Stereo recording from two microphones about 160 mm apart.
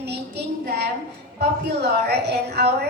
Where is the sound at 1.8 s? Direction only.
90° right.